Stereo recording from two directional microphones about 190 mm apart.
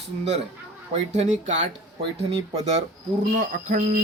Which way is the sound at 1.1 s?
40° right (ahead or behind).